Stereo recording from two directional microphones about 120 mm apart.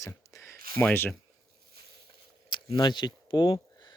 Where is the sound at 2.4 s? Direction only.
40° left (ahead or behind).